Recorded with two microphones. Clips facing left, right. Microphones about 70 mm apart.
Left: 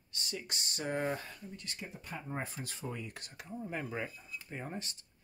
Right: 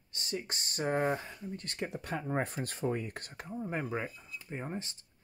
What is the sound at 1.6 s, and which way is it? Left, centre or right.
Speech, right.